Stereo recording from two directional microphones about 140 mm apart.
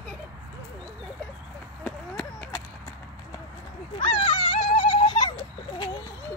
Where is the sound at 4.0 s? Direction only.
40° left (ahead or behind).